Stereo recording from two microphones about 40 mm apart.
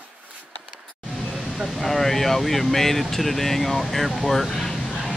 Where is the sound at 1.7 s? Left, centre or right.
Centre.